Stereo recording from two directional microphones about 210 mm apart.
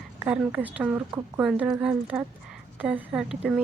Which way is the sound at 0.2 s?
5° right (ahead or behind).